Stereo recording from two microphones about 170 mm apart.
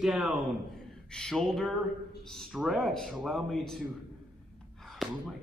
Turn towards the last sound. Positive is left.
turn(degrees=0)  # may be behind; listen again after turning